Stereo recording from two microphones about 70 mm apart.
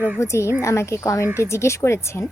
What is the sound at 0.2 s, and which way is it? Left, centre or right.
Speech, left.